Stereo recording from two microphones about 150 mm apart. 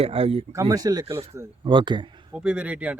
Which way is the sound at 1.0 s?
40° right (ahead or behind).